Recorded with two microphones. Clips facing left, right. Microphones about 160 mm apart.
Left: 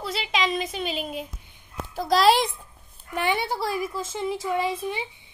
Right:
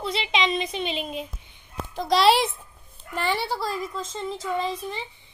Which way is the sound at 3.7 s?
5° left (ahead or behind).